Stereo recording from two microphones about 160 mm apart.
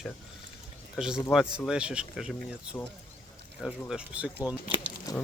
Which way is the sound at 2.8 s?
10° left (ahead or behind).